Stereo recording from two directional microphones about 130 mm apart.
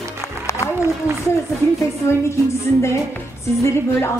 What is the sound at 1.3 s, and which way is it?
Music, 20° left (ahead or behind).